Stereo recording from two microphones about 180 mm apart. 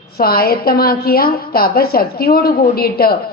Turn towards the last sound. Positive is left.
turn(degrees=55)  # may be behind; listen again after turning